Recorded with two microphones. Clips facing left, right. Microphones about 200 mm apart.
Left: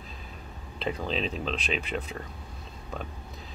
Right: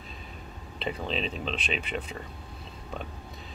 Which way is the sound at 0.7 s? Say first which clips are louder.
Left 1 dB; centre (ahead or behind).